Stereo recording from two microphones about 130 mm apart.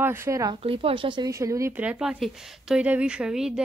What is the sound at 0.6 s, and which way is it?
Speech, 45° right (ahead or behind).